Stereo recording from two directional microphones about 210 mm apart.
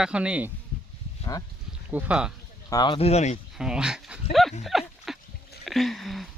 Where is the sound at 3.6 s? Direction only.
5° right (ahead or behind).